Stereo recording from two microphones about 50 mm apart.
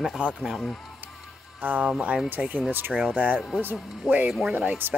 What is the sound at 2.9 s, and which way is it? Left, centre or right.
Speech, centre.